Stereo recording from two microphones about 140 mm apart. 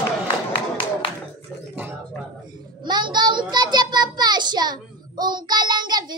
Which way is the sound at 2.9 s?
30° right (ahead or behind).